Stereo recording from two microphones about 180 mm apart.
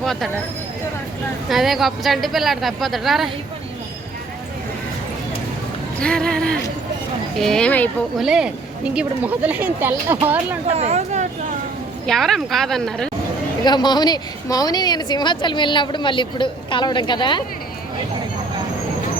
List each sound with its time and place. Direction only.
0.0 s speech: centre (ahead or behind)
1.5 s speech: centre (ahead or behind)
6.0 s speech: 5° left (ahead or behind)
8.2 s speech: 5° right (ahead or behind)
10.7 s speech: 35° right (ahead or behind)
12.0 s speech: centre (ahead or behind)
13.7 s a woman's voice: 25° left (ahead or behind)